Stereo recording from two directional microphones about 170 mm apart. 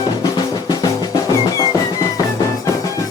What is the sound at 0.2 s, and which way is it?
Music, 25° left (ahead or behind).